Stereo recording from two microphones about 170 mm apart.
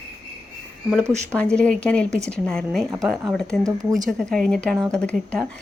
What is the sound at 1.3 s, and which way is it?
A woman's voice, 5° left (ahead or behind).